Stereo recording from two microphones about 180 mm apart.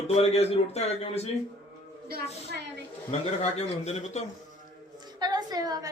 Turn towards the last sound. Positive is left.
turn(degrees=-20)  # may be behind; listen again after turning